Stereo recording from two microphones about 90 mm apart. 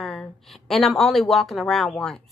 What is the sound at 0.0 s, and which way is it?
A woman's voice, centre (ahead or behind).